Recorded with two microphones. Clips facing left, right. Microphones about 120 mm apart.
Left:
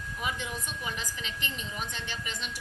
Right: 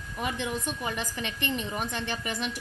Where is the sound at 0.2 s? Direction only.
55° right (ahead or behind).